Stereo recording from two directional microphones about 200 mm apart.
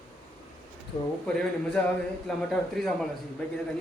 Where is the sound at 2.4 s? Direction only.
5° left (ahead or behind).